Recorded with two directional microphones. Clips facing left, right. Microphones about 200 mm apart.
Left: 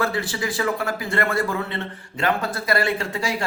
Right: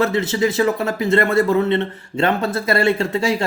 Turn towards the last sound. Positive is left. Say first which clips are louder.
# right 7 dB
turn(degrees=-25)  # may be behind; listen again after turning